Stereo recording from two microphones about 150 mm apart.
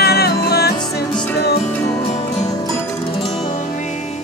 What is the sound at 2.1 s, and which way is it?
Music, 45° left (ahead or behind).